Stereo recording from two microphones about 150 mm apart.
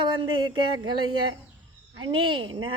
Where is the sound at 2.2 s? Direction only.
35° right (ahead or behind).